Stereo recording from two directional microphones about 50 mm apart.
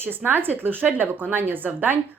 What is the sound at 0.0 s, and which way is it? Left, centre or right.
Speech, right.